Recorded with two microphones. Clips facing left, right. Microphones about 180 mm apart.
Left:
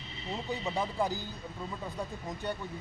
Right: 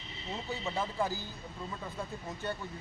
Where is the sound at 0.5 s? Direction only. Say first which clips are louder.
Left 2 dB; 15° left (ahead or behind).